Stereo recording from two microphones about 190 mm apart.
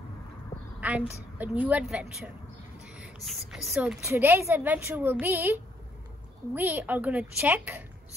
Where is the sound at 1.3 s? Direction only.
10° right (ahead or behind).